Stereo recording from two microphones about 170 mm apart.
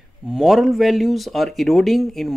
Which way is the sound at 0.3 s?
Centre (ahead or behind).